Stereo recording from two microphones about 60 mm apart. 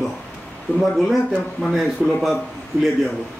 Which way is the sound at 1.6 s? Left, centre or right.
Centre.